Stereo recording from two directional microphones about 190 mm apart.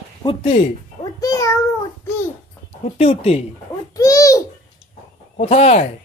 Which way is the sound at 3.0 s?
30° left (ahead or behind).